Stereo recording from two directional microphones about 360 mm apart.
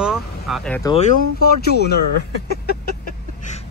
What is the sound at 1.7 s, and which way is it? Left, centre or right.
Speech, left.